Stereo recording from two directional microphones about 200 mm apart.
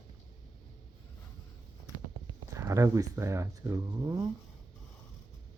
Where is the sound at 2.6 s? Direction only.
15° right (ahead or behind).